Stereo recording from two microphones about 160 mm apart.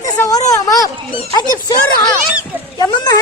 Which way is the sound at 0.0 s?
20° left (ahead or behind).